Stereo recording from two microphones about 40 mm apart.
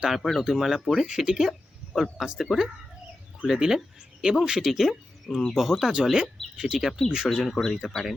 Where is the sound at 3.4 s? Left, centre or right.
Centre.